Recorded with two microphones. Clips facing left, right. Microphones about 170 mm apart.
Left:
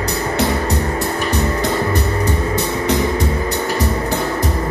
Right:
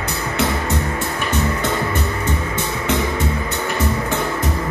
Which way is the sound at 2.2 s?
35° left (ahead or behind).